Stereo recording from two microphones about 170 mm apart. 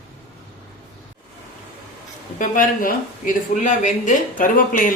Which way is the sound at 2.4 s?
50° left (ahead or behind).